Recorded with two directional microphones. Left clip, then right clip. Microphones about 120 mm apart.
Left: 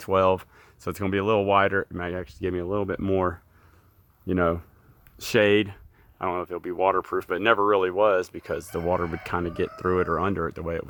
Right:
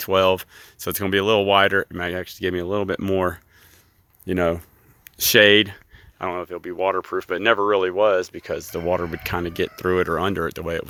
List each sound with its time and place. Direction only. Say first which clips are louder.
0.0 s speech: right 3 dB; 20° right (ahead or behind); by 3.0 s 40° right (ahead or behind)
3.0 s speech: right 3 dB; 30° right (ahead or behind)
6.3 s speech: right 1 dB; centre (ahead or behind)
7.3 s speech: right 3 dB; 15° right (ahead or behind)
9.0 s speech: right 2 dB; 25° right (ahead or behind)